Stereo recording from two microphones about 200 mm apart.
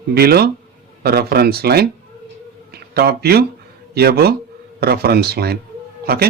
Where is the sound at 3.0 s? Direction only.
50° right (ahead or behind).